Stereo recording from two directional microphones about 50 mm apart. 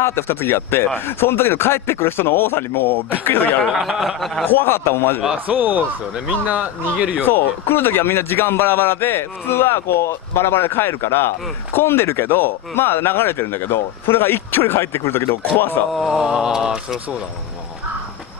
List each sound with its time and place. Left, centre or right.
0.0 s a man's voice: left
3.7 s mantra: centre
4.5 s a man's voice: left
5.5 s a man's voice: right
7.2 s a man's voice: left
15.9 s speech: centre
16.2 s mantra: centre